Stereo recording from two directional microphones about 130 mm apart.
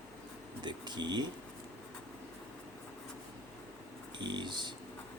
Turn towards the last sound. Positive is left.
turn(degrees=-35)  # may be behind; listen again after turning